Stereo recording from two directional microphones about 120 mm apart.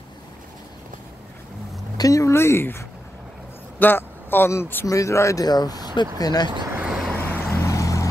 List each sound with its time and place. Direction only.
2.0 s speech: 30° left (ahead or behind)
3.8 s speech: 15° left (ahead or behind); by 6.5 s 35° left (ahead or behind)
6.8 s vehicle: centre (ahead or behind)
7.2 s vehicle: 20° left (ahead or behind)